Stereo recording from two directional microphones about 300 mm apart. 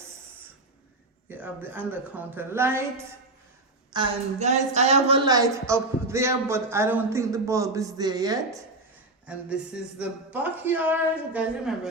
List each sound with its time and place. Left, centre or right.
1.3 s a woman's voice: centre
3.9 s a woman's voice: centre